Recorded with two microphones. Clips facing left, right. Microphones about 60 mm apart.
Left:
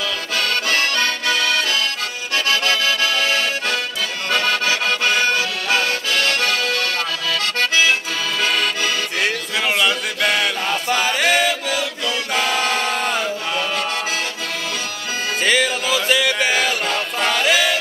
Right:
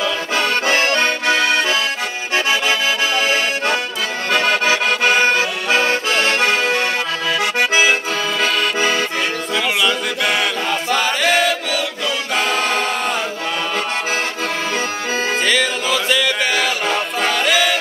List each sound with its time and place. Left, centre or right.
0.0 s accordion: right
9.6 s music: centre
11.1 s chant: centre
12.4 s music: centre
12.8 s choir: centre
15.4 s music: centre
16.8 s music: centre
17.4 s music: centre